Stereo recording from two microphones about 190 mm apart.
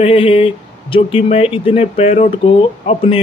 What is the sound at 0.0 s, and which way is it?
Speech, 30° left (ahead or behind).